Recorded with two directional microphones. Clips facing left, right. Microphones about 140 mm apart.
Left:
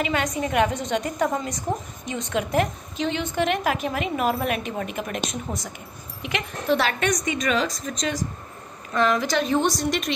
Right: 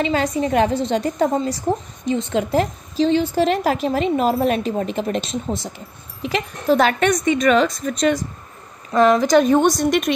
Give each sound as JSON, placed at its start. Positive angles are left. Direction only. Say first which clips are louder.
{"t": 0.0, "sound": "a woman's voice", "louder": "right 5 dB", "side_deg": -30}
{"t": 6.2, "sound": "a woman's voice", "louder": "right 6 dB", "side_deg": -40}
{"t": 8.9, "sound": "a woman's voice", "louder": "right 8 dB", "side_deg": -40}